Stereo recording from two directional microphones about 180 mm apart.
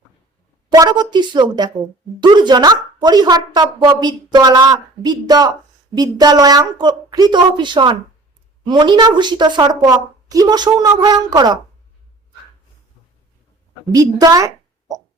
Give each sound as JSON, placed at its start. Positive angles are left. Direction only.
{"t": 0.7, "sound": "speech", "side_deg": -20}
{"t": 13.9, "sound": "speech", "side_deg": -20}